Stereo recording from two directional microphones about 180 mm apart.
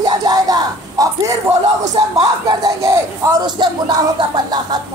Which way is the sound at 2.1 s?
20° right (ahead or behind).